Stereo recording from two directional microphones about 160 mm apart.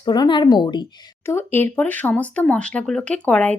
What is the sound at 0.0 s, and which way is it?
Speech, 25° left (ahead or behind).